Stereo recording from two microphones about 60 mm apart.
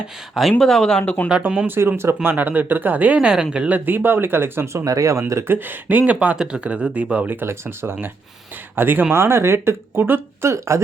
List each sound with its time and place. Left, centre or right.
0.6 s speech: centre
1.3 s speech: right
1.6 s speech: right
2.2 s speech: right
3.2 s speech: centre
3.7 s speech: right
4.9 s speech: right
5.5 s speech: right
6.3 s speech: centre
7.3 s speech: right
10.5 s speech: right